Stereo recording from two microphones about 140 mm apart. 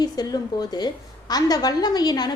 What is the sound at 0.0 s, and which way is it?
A woman's voice, 30° left (ahead or behind).